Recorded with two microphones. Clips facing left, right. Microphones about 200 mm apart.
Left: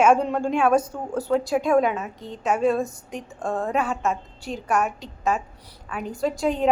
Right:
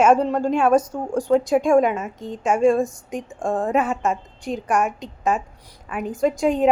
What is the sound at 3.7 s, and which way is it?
A woman's voice, centre (ahead or behind).